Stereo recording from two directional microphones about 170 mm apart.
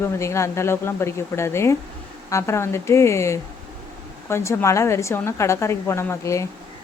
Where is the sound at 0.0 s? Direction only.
15° left (ahead or behind).